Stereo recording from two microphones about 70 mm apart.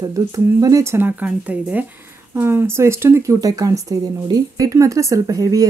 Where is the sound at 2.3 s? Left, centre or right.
Right.